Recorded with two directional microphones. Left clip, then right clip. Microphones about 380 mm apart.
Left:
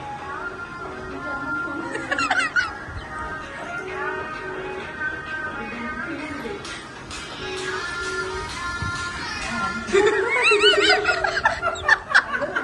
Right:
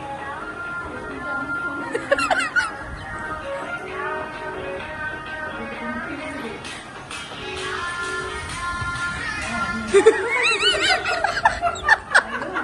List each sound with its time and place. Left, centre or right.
1.9 s fowl: centre
9.9 s snicker: centre